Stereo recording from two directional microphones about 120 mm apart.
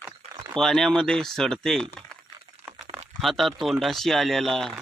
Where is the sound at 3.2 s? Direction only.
Centre (ahead or behind).